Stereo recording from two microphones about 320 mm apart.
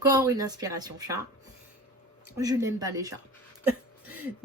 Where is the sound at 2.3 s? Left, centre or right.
Centre.